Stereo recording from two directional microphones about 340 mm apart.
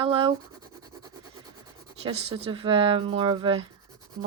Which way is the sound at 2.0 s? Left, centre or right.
Centre.